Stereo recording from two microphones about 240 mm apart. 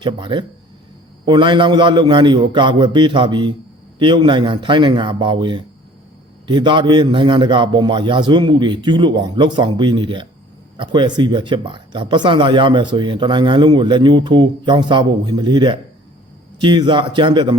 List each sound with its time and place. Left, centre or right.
0.0 s speech: centre